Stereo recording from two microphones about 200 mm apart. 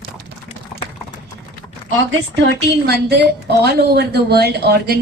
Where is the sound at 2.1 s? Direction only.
60° right (ahead or behind).